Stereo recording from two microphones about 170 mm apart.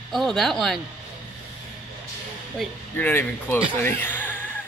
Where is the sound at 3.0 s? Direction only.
10° left (ahead or behind).